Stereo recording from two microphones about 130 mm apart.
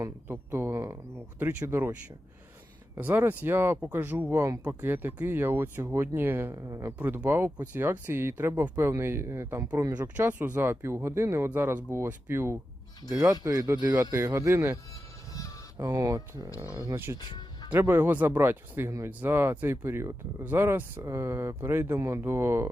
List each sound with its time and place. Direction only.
0.3 s speech: 15° right (ahead or behind)
7.0 s speech: 15° right (ahead or behind)
10.2 s speech: 15° right (ahead or behind)
15.3 s music: 25° left (ahead or behind)
15.8 s speech: 25° right (ahead or behind)
17.2 s music: 35° left (ahead or behind)
17.7 s speech: 15° right (ahead or behind)